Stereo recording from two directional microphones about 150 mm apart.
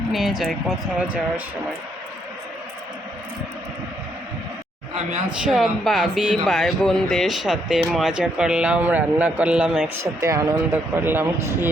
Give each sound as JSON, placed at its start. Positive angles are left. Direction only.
{"t": 0.1, "sound": "speech", "side_deg": 0}
{"t": 5.5, "sound": "speech", "side_deg": 0}
{"t": 10.0, "sound": "speech", "side_deg": -20}